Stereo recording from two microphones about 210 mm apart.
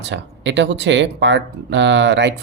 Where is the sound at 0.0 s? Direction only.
60° right (ahead or behind).